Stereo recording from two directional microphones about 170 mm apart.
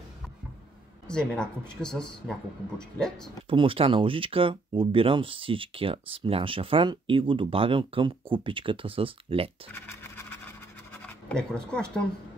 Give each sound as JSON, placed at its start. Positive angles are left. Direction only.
{"t": 1.0, "sound": "speech", "side_deg": 5}
{"t": 3.4, "sound": "speech", "side_deg": -30}
{"t": 10.9, "sound": "scratch", "side_deg": 5}